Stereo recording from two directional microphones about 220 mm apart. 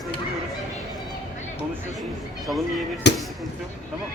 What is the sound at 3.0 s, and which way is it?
Speech, 50° left (ahead or behind).